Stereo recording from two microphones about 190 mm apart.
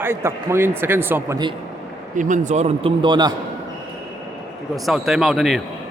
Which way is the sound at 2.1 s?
40° right (ahead or behind).